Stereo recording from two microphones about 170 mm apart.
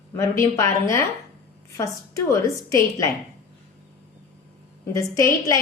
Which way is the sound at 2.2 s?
20° left (ahead or behind).